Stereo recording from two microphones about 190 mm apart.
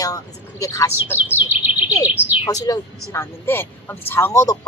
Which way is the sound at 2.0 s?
10° right (ahead or behind).